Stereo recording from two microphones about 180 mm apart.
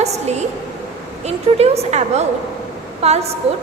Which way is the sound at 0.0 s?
40° right (ahead or behind).